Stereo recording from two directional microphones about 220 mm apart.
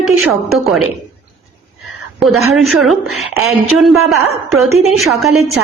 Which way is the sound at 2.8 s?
Centre (ahead or behind).